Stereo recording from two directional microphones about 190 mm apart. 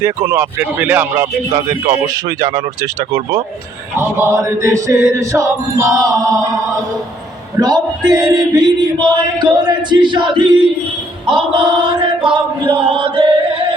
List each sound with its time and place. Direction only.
0.0 s mantra: 15° right (ahead or behind)
1.9 s male singing: 20° right (ahead or behind)
3.9 s mantra: 15° right (ahead or behind)
7.6 s male singing: 20° right (ahead or behind)
11.3 s chant: 25° right (ahead or behind)